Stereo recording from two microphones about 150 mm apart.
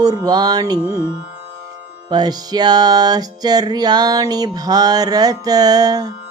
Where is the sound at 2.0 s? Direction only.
25° right (ahead or behind).